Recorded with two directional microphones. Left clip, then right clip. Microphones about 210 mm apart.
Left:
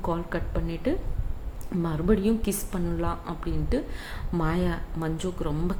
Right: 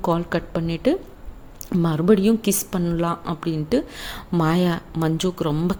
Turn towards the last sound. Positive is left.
turn(degrees=-45)  # may be behind; listen again after turning